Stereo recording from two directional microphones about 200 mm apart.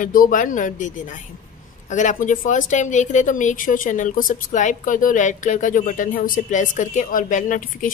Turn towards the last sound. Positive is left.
turn(degrees=40)  # may be behind; listen again after turning